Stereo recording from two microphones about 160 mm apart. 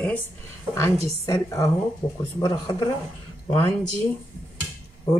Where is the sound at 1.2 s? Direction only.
20° left (ahead or behind).